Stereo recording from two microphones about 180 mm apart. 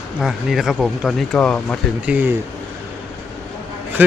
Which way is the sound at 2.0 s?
10° right (ahead or behind).